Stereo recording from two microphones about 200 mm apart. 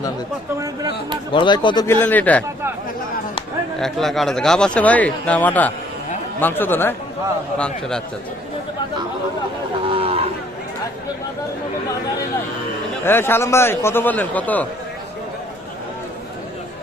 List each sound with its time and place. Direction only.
1.3 s speech: 25° left (ahead or behind)
2.0 s a man's voice: 10° left (ahead or behind)
3.8 s a man's voice: centre (ahead or behind)
9.9 s a sound: 30° right (ahead or behind)
13.1 s a man's voice: 10° left (ahead or behind)